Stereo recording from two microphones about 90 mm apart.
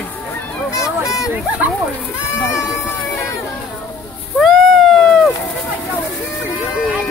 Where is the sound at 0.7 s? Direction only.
35° left (ahead or behind).